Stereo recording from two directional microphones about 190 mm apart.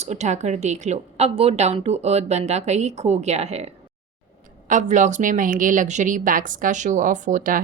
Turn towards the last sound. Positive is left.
turn(degrees=-45)  # may be behind; listen again after turning